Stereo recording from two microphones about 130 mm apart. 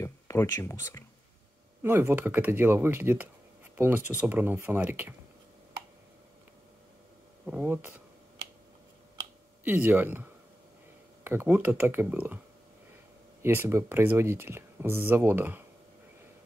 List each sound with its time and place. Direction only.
0.0 s speech: 25° left (ahead or behind)
1.8 s speech: 15° right (ahead or behind)
7.4 s speech: 10° right (ahead or behind)
9.7 s speech: 15° right (ahead or behind)
11.2 s speech: 15° right (ahead or behind)
13.4 s speech: 20° right (ahead or behind)